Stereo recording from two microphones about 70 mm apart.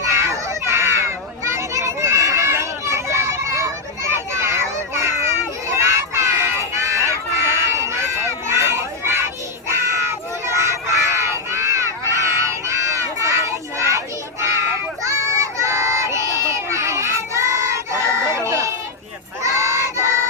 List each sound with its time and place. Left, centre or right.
0.1 s children playing: right
9.6 s crowd: right
18.3 s a sound: right
19.4 s crowd: right